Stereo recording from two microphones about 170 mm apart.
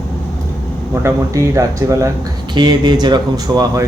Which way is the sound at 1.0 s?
20° right (ahead or behind).